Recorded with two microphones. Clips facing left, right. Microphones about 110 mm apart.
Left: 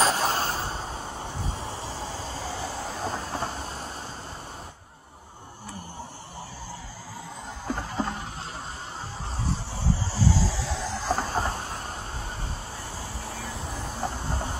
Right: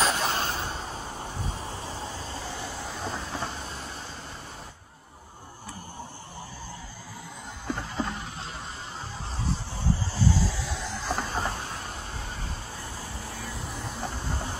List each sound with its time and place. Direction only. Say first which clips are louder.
0.1 s a sound: left 2 dB; 35° left (ahead or behind)
1.2 s vehicle: left 1 dB; 30° left (ahead or behind)
7.6 s music: left 1 dB; 35° left (ahead or behind)
10.1 s train: left 2 dB; 30° left (ahead or behind)
13.2 s vehicle: left 3 dB; 25° left (ahead or behind)